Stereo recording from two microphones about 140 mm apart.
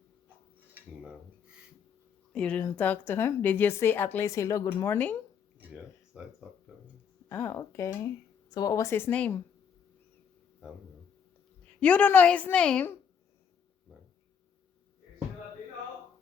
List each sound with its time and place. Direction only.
2.3 s a woman's voice: 10° left (ahead or behind)
5.5 s a sound: 5° right (ahead or behind)
7.3 s speech: 15° left (ahead or behind)
11.8 s a woman's voice: 10° left (ahead or behind)